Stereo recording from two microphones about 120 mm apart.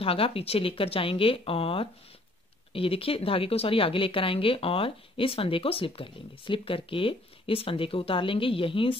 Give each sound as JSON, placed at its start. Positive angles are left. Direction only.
{"t": 0.0, "sound": "speech", "side_deg": 50}